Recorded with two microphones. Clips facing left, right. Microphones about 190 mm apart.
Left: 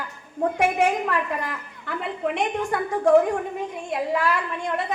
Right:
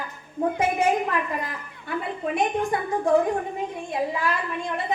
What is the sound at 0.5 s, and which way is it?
A woman's voice, 75° left (ahead or behind).